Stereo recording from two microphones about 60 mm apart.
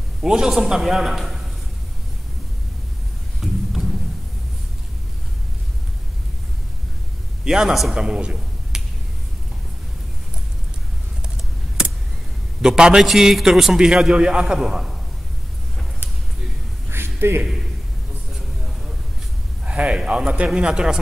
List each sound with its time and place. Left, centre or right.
0.2 s a man's voice: centre
3.3 s a sound: centre
7.4 s a man's voice: centre
12.6 s a man's voice: centre
16.9 s a sound: right
19.6 s a man's voice: centre